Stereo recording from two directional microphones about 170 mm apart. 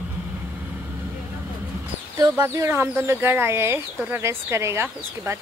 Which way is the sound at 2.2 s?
20° right (ahead or behind).